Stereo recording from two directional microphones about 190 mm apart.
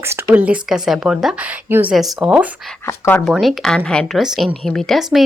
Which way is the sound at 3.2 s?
Centre (ahead or behind).